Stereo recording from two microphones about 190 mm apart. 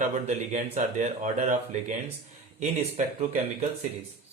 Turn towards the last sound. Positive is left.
turn(degrees=-35)  # may be behind; listen again after turning